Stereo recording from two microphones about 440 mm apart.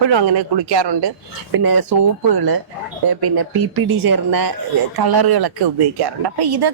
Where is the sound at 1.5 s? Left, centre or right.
Right.